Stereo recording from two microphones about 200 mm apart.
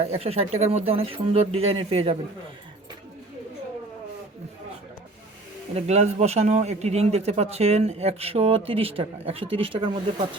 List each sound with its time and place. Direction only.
0.0 s speech: 30° right (ahead or behind)
5.7 s a man's voice: 30° right (ahead or behind)